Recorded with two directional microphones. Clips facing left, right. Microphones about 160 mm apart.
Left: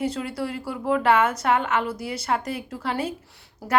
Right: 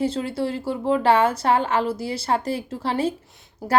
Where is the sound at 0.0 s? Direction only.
30° right (ahead or behind).